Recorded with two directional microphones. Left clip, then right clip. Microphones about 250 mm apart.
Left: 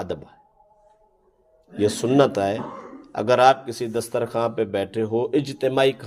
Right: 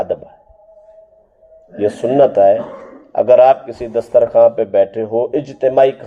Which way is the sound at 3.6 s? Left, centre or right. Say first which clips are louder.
Right 7 dB; left.